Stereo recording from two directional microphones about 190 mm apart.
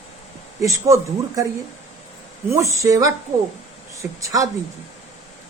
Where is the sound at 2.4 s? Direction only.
15° right (ahead or behind).